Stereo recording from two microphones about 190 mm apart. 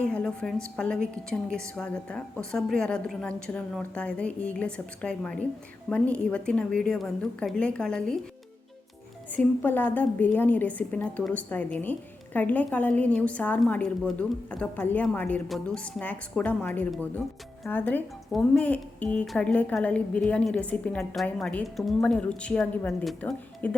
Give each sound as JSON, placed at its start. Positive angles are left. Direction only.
{"t": 0.0, "sound": "a woman's voice", "side_deg": 5}
{"t": 9.3, "sound": "a woman's voice", "side_deg": 10}